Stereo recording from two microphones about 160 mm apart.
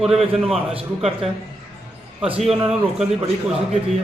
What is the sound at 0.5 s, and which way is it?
Speech, 35° right (ahead or behind).